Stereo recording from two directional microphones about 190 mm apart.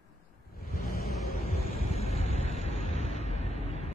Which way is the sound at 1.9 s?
35° left (ahead or behind).